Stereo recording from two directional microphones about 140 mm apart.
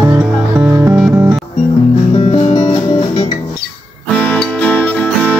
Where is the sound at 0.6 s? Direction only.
20° right (ahead or behind).